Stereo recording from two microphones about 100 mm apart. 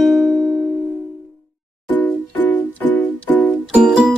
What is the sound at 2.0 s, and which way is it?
Music, 15° left (ahead or behind).